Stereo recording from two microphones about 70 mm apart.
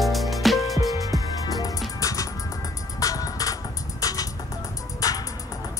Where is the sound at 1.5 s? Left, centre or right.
Left.